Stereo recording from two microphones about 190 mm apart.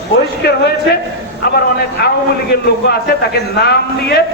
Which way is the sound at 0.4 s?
60° left (ahead or behind).